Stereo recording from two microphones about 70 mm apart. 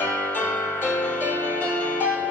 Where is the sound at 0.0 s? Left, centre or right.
Left.